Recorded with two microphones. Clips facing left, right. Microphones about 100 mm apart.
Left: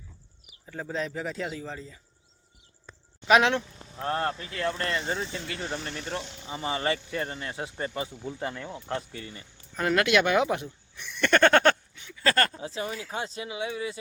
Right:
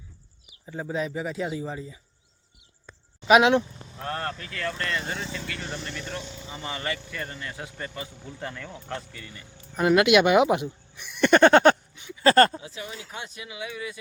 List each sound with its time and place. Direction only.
0.6 s speech: 15° right (ahead or behind)
3.2 s speech: 10° right (ahead or behind)
4.0 s speech: 25° left (ahead or behind)
9.2 s speech: 30° left (ahead or behind)
9.7 s speech: 15° right (ahead or behind)
12.6 s speech: 35° left (ahead or behind)